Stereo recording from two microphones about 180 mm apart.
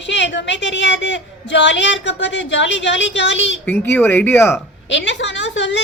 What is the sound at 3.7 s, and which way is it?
Speech, 10° left (ahead or behind).